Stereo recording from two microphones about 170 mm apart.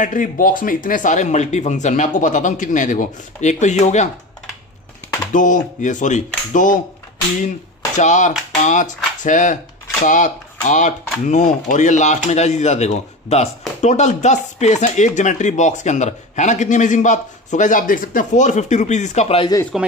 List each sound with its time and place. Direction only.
0.0 s speech: 50° left (ahead or behind)
5.3 s speech: 50° left (ahead or behind)
8.0 s speech: 45° left (ahead or behind)
8.3 s a sound: 5° right (ahead or behind)
8.6 s speech: 45° left (ahead or behind)
19.7 s speech: centre (ahead or behind)